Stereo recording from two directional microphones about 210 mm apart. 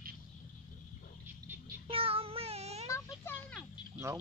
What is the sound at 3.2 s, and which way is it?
Speech, 10° left (ahead or behind).